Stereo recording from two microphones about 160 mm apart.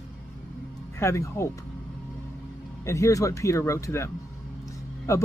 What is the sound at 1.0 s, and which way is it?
Speech, 15° left (ahead or behind).